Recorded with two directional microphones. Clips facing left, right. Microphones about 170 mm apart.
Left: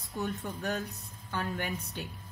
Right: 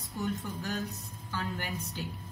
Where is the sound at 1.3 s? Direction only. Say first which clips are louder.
Left 2 dB; 55° left (ahead or behind).